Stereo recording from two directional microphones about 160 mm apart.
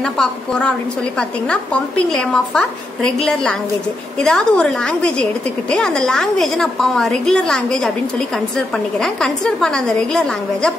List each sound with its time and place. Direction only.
0.0 s a woman's voice: 5° left (ahead or behind)